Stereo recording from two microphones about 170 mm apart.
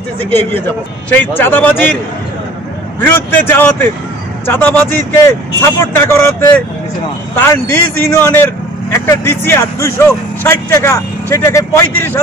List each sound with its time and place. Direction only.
0.2 s speech: 10° left (ahead or behind)
3.2 s speech: 10° left (ahead or behind)